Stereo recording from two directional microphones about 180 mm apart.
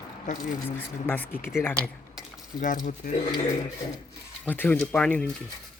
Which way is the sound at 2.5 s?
45° left (ahead or behind).